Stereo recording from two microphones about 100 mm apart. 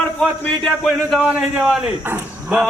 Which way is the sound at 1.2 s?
5° right (ahead or behind).